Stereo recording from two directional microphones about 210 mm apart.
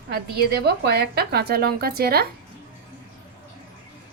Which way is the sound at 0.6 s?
50° right (ahead or behind).